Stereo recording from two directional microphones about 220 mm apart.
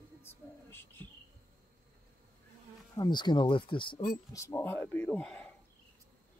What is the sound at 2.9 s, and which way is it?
Speech, 20° left (ahead or behind).